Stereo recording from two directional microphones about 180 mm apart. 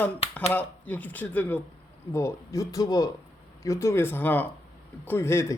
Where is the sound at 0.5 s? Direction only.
10° left (ahead or behind).